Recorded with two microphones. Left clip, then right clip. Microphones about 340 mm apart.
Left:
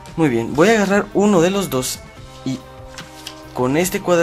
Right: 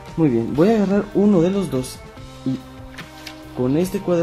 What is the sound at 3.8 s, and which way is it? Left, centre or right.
Speech, left.